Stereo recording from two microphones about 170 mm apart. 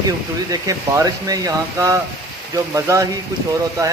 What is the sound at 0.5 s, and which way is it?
Speech, 20° right (ahead or behind).